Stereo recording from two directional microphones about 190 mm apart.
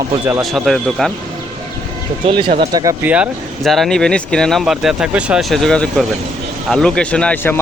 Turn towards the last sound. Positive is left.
turn(degrees=10)  # may be behind; listen again after turning